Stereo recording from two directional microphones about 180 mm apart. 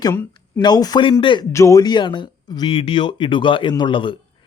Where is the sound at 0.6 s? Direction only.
20° left (ahead or behind).